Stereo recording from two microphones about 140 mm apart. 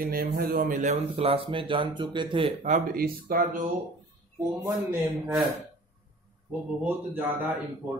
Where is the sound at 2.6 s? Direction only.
75° right (ahead or behind).